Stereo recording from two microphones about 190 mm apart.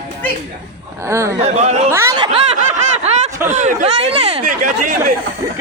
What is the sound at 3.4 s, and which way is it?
A man's voice, 40° right (ahead or behind).